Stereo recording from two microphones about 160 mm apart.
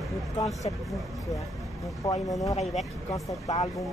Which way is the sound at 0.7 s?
40° left (ahead or behind).